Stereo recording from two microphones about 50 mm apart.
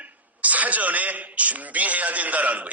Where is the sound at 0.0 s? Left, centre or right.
Right.